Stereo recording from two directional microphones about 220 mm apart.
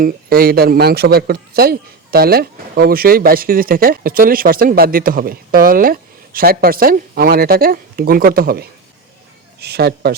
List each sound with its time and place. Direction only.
0.0 s speech: 45° right (ahead or behind)